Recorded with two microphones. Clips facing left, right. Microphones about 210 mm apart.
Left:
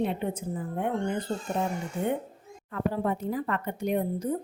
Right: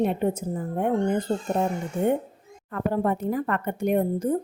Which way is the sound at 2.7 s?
55° right (ahead or behind).